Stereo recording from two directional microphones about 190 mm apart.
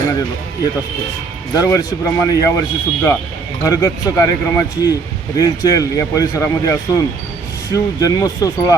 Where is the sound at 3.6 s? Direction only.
20° left (ahead or behind).